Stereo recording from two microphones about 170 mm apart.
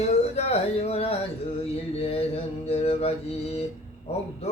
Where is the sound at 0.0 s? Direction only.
40° left (ahead or behind).